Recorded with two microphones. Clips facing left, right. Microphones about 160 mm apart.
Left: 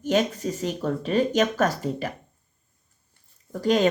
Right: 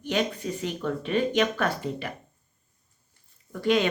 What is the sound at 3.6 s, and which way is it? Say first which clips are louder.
Speech: left 2 dB; 40° left (ahead or behind).